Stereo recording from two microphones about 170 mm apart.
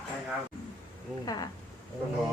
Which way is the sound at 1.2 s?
25° left (ahead or behind).